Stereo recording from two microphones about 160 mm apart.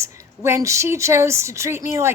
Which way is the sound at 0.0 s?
20° right (ahead or behind).